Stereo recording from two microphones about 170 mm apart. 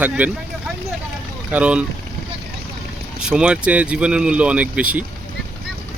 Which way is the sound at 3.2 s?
5° right (ahead or behind).